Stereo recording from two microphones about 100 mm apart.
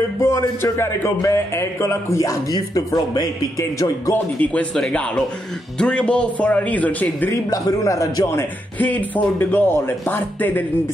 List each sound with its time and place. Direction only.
0.2 s speech: 30° left (ahead or behind)
4.1 s speech: 15° left (ahead or behind)
7.5 s a man's voice: 35° left (ahead or behind)
8.7 s speech: 15° left (ahead or behind)